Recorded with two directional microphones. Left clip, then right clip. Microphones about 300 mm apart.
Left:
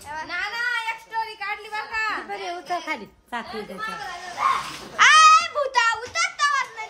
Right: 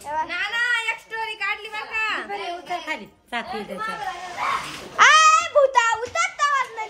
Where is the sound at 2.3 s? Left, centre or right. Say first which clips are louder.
Even; left.